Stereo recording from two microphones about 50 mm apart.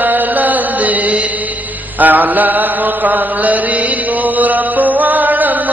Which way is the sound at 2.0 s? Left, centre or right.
Right.